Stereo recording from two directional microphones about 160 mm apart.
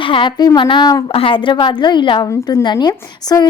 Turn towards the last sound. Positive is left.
turn(degrees=25)  # may be behind; listen again after turning